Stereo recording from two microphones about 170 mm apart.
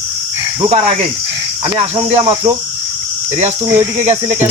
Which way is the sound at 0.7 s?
40° right (ahead or behind).